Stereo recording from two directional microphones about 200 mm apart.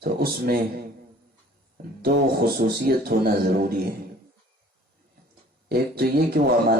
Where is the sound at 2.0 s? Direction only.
50° right (ahead or behind).